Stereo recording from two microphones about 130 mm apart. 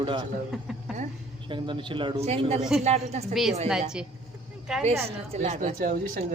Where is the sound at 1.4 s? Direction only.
40° right (ahead or behind).